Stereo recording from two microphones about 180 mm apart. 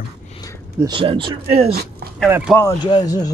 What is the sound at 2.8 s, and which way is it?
Speech, 20° left (ahead or behind).